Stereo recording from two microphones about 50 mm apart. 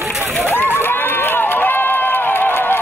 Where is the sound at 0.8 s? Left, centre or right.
Left.